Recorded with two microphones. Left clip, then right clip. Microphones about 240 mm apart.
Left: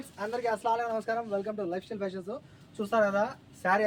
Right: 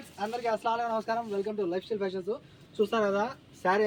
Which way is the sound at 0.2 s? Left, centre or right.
Left.